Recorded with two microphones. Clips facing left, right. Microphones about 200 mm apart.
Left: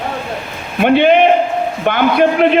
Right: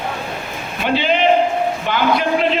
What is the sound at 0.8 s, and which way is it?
A man's voice, 55° left (ahead or behind).